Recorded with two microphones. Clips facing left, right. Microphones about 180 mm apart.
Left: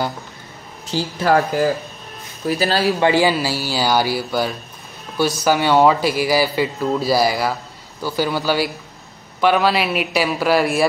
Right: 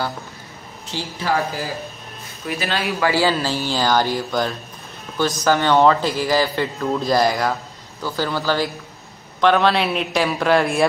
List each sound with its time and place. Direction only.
0.9 s speech: 55° left (ahead or behind)
2.4 s speech: 35° left (ahead or behind)
3.0 s a man's voice: 20° left (ahead or behind)
3.3 s a man's voice: 10° left (ahead or behind)